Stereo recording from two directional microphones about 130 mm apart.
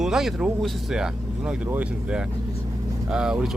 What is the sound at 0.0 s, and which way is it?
Speech, 5° right (ahead or behind).